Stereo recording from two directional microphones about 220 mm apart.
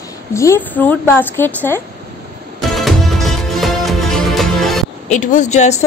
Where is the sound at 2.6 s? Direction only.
Centre (ahead or behind).